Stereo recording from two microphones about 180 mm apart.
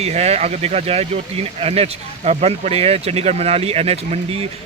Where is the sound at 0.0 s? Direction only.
35° right (ahead or behind).